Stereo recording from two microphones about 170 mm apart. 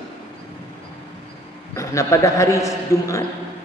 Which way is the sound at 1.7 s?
20° left (ahead or behind).